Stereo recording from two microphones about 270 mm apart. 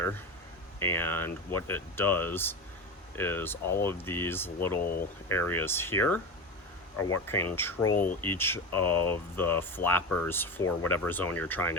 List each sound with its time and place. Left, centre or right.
0.8 s speech: centre
6.9 s speech: left
7.3 s speech: centre
7.9 s speech: left
8.2 s speech: centre